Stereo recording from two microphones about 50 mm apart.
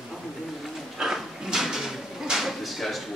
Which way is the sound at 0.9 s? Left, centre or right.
Centre.